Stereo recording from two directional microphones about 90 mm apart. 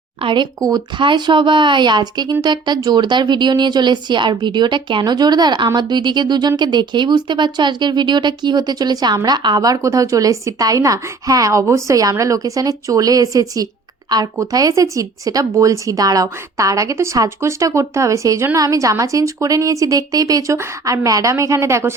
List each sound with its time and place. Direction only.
0.2 s speech: 70° right (ahead or behind); by 9.6 s 55° right (ahead or behind)
9.6 s speech: 40° right (ahead or behind)